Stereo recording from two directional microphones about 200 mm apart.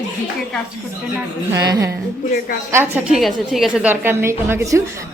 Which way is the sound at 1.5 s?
20° right (ahead or behind).